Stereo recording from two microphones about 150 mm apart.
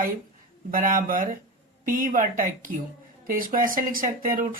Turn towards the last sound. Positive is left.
turn(degrees=-65)  # may be behind; listen again after turning